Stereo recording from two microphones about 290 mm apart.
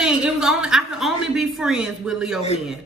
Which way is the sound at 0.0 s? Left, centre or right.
Centre.